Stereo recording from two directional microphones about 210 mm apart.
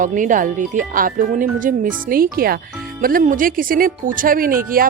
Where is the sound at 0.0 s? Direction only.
40° right (ahead or behind).